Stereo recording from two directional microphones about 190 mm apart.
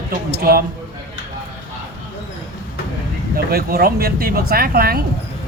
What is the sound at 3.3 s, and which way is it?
Speech, 55° right (ahead or behind).